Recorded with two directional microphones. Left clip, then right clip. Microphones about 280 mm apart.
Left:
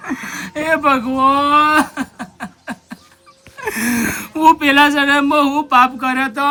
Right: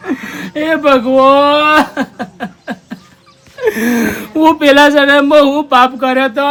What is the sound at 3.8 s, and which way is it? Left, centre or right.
A woman's voice, centre.